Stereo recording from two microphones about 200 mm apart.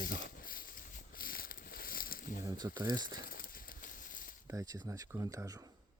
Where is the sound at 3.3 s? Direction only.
45° left (ahead or behind).